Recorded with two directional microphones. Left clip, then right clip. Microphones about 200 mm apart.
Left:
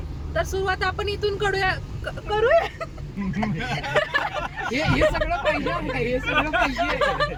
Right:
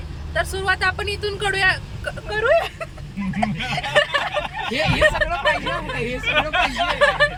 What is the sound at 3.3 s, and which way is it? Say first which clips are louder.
Speech: right 4 dB; 15° right (ahead or behind).